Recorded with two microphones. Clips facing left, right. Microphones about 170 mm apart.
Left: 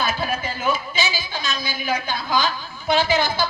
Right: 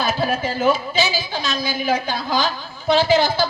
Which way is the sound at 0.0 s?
40° right (ahead or behind).